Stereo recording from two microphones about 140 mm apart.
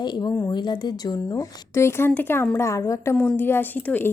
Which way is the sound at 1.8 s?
20° left (ahead or behind).